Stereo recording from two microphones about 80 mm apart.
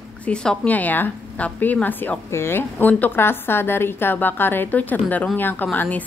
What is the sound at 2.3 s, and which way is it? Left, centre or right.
A woman's voice, left.